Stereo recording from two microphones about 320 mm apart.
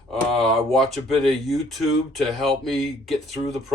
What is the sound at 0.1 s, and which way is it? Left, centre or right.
Speech, centre.